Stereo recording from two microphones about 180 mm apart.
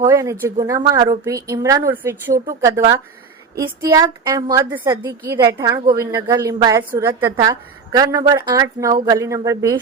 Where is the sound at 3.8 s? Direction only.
20° right (ahead or behind).